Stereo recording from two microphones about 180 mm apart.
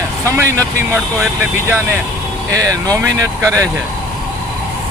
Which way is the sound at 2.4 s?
15° right (ahead or behind).